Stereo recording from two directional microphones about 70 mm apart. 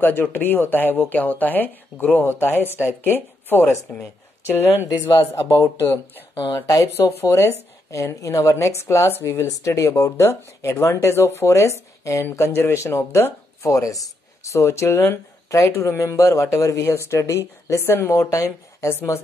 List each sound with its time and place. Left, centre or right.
0.0 s speech: left
5.2 s speech: left
6.3 s speech: left
6.6 s speech: left
7.0 s speech: left